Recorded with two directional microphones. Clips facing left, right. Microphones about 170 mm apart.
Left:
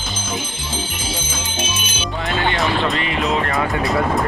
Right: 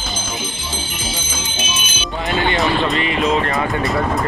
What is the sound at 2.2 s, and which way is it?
Speech, centre (ahead or behind).